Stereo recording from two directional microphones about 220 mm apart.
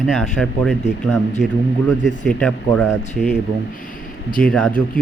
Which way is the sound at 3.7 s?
40° left (ahead or behind).